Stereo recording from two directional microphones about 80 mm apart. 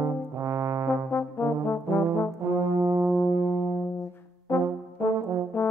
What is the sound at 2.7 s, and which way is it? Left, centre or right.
Brass instrument, right.